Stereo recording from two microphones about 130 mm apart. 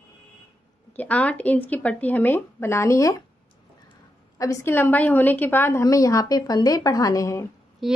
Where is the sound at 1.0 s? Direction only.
10° left (ahead or behind).